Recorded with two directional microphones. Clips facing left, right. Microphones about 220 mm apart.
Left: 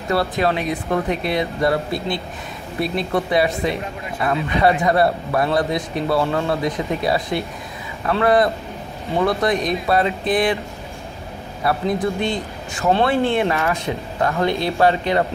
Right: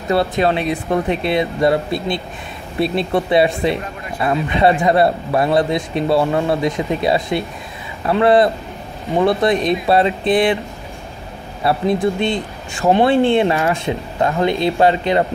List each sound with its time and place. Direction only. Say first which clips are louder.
0.1 s speech: right 3 dB; 25° right (ahead or behind)
11.6 s speech: right 4 dB; 25° right (ahead or behind)